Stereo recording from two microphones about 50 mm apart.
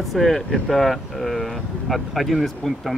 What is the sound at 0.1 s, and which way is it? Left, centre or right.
Speech, centre.